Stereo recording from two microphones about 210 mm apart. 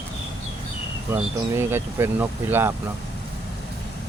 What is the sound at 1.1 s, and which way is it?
Speech, 10° right (ahead or behind).